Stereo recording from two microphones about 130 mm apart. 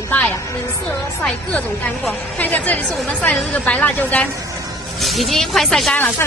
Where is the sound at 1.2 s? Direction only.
10° left (ahead or behind).